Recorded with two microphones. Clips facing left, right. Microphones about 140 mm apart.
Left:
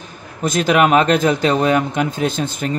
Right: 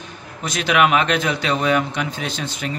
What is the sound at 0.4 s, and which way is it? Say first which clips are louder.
Speech: left 4 dB; 45° left (ahead or behind).